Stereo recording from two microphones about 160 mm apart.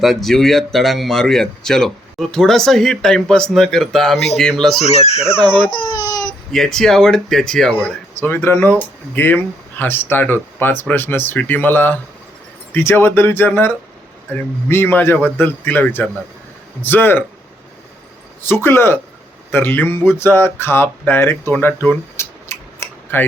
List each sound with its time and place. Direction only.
0.0 s speech: centre (ahead or behind)
4.9 s speech: 40° left (ahead or behind)
5.8 s baby cry: 25° left (ahead or behind)
6.5 s speech: 5° left (ahead or behind)
18.4 s speech: 15° left (ahead or behind)